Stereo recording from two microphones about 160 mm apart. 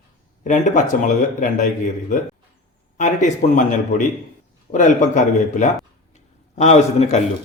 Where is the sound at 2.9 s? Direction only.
50° left (ahead or behind).